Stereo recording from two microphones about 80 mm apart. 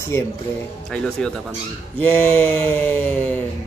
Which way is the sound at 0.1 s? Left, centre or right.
Left.